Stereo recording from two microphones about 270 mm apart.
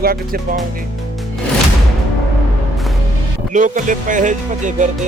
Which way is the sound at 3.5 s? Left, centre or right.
Right.